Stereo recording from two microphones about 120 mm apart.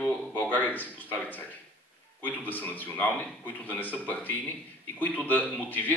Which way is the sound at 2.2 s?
15° left (ahead or behind).